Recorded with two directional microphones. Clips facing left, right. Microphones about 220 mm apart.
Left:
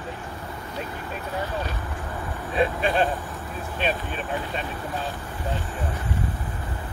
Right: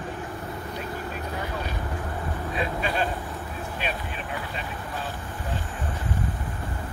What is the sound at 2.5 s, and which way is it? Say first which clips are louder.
Vehicle: left 6 dB; 30° left (ahead or behind).